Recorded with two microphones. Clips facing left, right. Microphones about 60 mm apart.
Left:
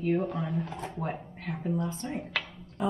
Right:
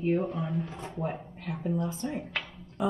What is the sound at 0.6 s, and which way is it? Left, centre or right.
Speech, left.